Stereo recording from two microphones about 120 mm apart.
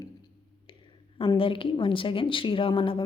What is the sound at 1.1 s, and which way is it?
Speech, 50° left (ahead or behind).